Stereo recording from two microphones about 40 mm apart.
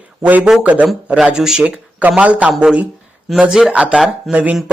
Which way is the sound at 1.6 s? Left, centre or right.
Right.